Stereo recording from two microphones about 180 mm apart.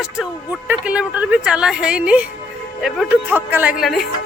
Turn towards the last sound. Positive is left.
turn(degrees=0)  # may be behind; listen again after turning